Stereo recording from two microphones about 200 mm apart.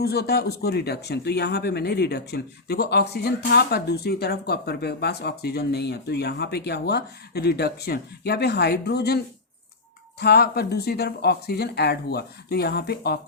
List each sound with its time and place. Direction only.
0.0 s speech: 50° left (ahead or behind)